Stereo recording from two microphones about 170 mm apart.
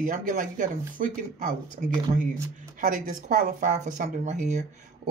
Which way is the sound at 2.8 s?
55° right (ahead or behind).